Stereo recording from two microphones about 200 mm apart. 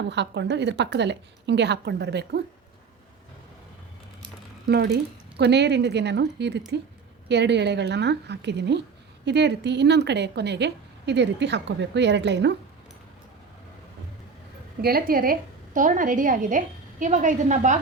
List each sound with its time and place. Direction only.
0.0 s a woman's voice: 60° right (ahead or behind)
4.7 s a woman's voice: 55° right (ahead or behind)
14.8 s a woman's voice: 50° right (ahead or behind)